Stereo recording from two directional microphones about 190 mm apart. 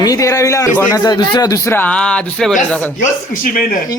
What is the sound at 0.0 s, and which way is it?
A man's voice, 20° left (ahead or behind).